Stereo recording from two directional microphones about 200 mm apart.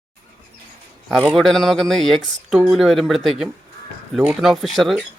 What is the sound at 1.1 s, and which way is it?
Speech, centre (ahead or behind).